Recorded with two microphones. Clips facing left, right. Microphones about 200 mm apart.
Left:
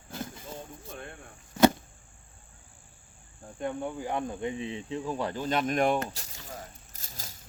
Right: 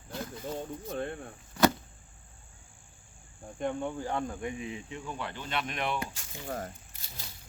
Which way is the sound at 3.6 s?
5° left (ahead or behind).